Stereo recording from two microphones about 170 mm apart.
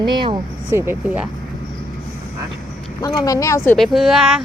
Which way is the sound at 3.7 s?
Centre (ahead or behind).